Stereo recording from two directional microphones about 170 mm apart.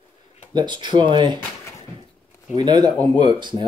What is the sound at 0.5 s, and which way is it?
Speech, 25° right (ahead or behind).